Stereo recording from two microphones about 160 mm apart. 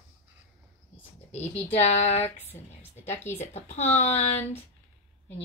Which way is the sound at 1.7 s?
45° left (ahead or behind).